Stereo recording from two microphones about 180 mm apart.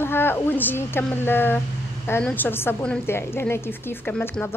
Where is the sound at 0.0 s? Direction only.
10° left (ahead or behind).